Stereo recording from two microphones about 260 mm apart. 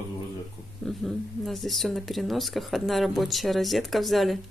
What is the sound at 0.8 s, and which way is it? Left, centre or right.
A woman's voice, centre.